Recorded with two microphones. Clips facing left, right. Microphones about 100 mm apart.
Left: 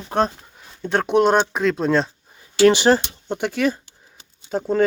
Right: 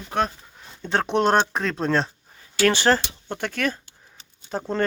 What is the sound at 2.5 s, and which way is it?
Speech, 15° left (ahead or behind).